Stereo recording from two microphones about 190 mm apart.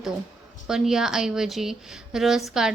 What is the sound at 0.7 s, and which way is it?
Speech, 5° right (ahead or behind).